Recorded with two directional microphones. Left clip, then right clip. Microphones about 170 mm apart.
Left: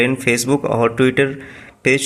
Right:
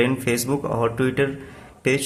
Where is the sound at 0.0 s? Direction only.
25° left (ahead or behind).